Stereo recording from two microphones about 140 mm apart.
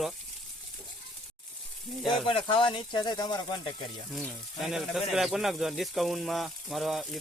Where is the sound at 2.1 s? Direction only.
35° left (ahead or behind).